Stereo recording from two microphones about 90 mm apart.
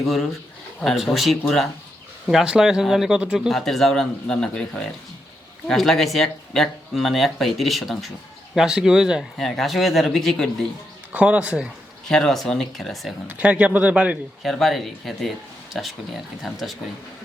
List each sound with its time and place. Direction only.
0.0 s speech: centre (ahead or behind)
3.5 s speech: 5° left (ahead or behind)
11.1 s speech: 15° right (ahead or behind)
12.0 s speech: 5° left (ahead or behind)
13.2 s speech: 15° right (ahead or behind)
14.4 s speech: centre (ahead or behind)